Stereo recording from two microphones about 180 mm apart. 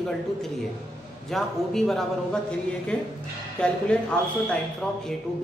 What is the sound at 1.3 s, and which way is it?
A man's voice, centre (ahead or behind).